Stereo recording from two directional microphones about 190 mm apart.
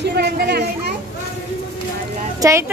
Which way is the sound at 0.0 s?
60° right (ahead or behind).